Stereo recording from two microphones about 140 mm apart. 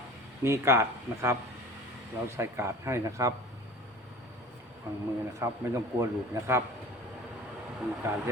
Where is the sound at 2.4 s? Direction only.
20° right (ahead or behind).